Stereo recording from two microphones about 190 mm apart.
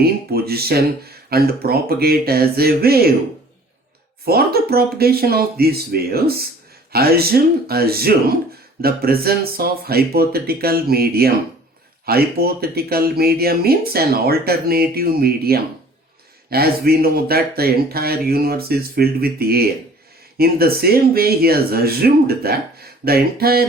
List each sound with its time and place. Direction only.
0.0 s speech: 55° right (ahead or behind)
4.3 s speech: 55° right (ahead or behind)